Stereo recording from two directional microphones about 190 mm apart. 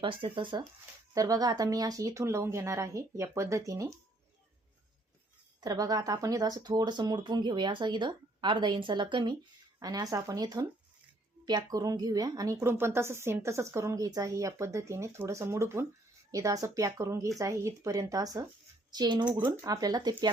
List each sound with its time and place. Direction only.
0.0 s speech: 25° right (ahead or behind)
5.5 s speech: 20° right (ahead or behind)